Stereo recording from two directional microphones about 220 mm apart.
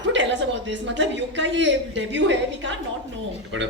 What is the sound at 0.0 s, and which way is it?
A man's voice, 55° right (ahead or behind).